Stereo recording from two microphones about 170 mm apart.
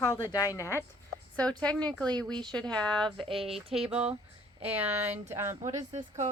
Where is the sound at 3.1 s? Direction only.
35° right (ahead or behind).